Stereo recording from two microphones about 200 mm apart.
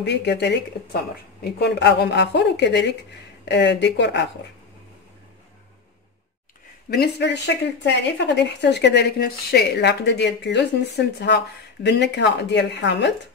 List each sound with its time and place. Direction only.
0.0 s speech: 60° left (ahead or behind)
6.9 s speech: 55° left (ahead or behind)